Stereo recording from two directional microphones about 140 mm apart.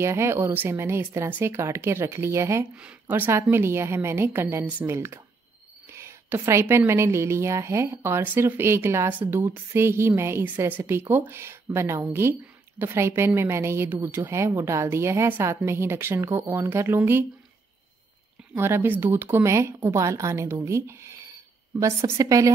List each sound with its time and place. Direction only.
0.0 s a woman's voice: 20° right (ahead or behind)
18.5 s a woman's voice: 15° right (ahead or behind)